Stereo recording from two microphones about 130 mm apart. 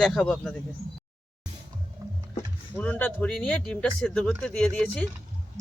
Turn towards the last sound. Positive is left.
turn(degrees=5)  # may be behind; listen again after turning